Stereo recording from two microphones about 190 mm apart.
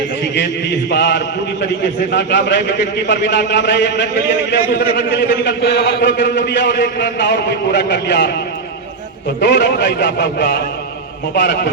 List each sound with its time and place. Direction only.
0.9 s a man's voice: 65° left (ahead or behind)
9.4 s a man's voice: 65° left (ahead or behind)